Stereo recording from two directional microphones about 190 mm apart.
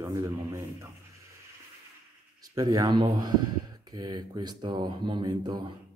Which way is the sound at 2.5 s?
20° right (ahead or behind).